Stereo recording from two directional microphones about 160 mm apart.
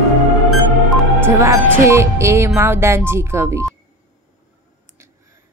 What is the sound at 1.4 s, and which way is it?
A woman's voice, 15° right (ahead or behind).